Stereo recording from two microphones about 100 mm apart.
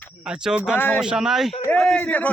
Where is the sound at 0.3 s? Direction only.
10° right (ahead or behind).